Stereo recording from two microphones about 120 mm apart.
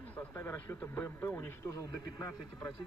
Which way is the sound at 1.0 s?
20° left (ahead or behind).